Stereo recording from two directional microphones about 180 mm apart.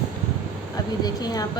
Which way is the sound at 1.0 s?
20° left (ahead or behind).